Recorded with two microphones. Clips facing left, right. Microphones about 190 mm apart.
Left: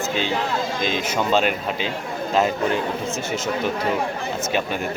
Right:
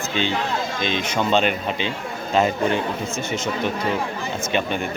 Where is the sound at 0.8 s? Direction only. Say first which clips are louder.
Right 2 dB; 5° left (ahead or behind).